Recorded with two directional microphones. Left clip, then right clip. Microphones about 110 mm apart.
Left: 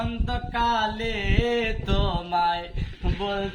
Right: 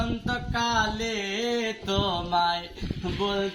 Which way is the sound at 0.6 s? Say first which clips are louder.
Left 3 dB; 15° left (ahead or behind).